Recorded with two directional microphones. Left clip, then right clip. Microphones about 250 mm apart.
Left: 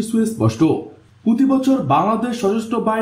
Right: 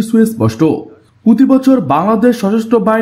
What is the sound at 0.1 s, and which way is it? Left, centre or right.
A man's voice, right.